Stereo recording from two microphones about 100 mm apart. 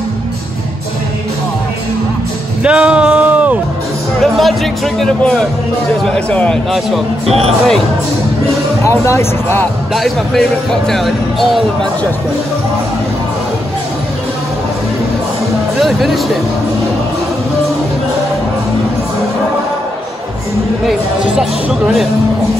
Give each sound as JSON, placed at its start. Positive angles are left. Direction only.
{"t": 2.6, "sound": "a sound", "side_deg": -10}
{"t": 4.2, "sound": "a man's voice", "side_deg": 0}
{"t": 7.2, "sound": "speech", "side_deg": -90}
{"t": 8.8, "sound": "speech", "side_deg": 30}
{"t": 9.9, "sound": "speech", "side_deg": 0}
{"t": 15.8, "sound": "speech", "side_deg": 0}
{"t": 21.4, "sound": "speech", "side_deg": -5}